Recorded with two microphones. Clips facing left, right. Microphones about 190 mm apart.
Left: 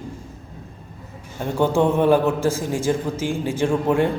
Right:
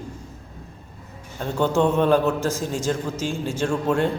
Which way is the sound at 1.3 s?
15° left (ahead or behind).